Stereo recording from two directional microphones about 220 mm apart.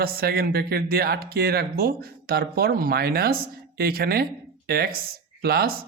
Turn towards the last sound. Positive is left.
turn(degrees=-45)  # may be behind; listen again after turning